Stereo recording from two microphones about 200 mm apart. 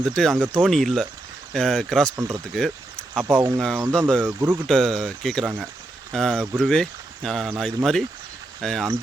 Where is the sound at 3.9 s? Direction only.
5° left (ahead or behind).